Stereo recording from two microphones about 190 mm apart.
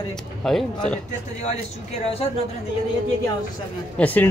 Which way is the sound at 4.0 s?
10° left (ahead or behind).